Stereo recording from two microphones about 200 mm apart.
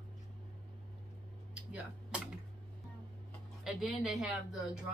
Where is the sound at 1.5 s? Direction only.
5° right (ahead or behind).